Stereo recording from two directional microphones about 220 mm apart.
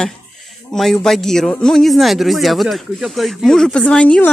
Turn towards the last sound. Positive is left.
turn(degrees=5)  # may be behind; listen again after turning